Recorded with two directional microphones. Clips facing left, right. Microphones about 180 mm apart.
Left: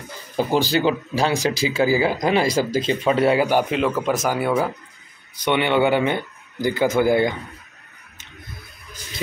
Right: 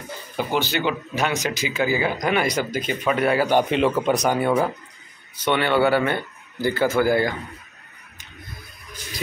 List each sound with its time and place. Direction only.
0.4 s speech: 35° left (ahead or behind)
3.4 s speech: 5° left (ahead or behind)